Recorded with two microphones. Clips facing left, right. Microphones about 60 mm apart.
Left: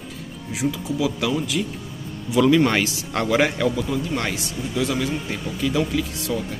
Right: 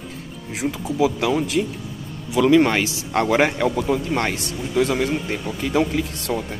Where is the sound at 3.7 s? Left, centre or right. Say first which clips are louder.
Right 3 dB; right.